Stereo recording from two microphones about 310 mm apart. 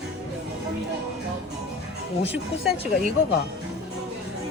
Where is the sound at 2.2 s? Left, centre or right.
Centre.